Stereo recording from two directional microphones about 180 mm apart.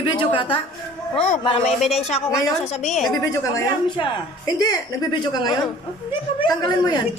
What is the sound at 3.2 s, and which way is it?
Speech, 20° left (ahead or behind).